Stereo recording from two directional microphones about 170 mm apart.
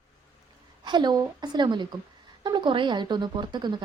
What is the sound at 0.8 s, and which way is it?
A woman's voice, 25° right (ahead or behind).